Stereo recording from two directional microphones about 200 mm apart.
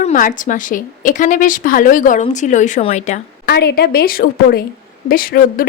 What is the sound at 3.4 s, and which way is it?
Speech, 55° left (ahead or behind).